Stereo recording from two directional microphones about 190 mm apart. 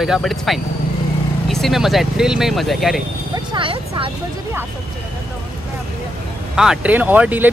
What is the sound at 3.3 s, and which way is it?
Speech, 25° right (ahead or behind).